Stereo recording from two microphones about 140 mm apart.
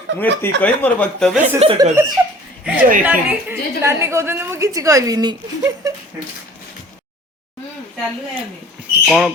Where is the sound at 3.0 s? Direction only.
15° right (ahead or behind).